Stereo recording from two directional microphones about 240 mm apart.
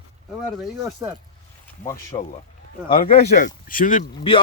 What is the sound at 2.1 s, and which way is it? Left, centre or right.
Speech, left.